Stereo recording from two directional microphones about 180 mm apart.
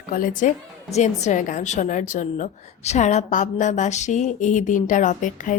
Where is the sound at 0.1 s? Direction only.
45° left (ahead or behind).